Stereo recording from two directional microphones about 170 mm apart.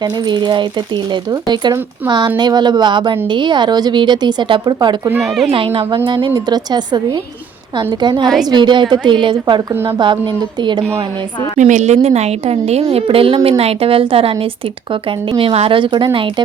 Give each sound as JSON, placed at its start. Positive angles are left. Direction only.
{"t": 0.0, "sound": "speech", "side_deg": -25}
{"t": 5.2, "sound": "speech", "side_deg": 0}
{"t": 5.5, "sound": "a woman's voice", "side_deg": -35}
{"t": 11.5, "sound": "a woman's voice", "side_deg": -45}